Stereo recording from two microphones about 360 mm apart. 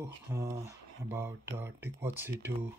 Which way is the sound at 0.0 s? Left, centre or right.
Centre.